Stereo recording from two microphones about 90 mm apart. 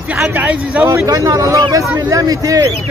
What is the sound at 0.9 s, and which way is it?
Speech, 35° right (ahead or behind).